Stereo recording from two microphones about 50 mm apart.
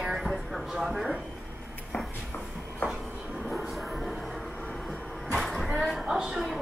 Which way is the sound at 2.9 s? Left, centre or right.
Centre.